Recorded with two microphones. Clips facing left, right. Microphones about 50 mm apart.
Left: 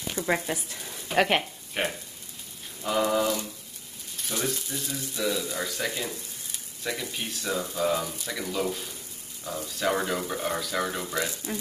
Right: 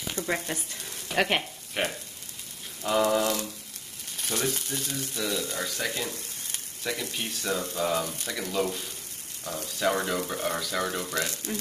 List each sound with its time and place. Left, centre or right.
0.1 s speech: centre
4.5 s speech: right
4.9 s speech: centre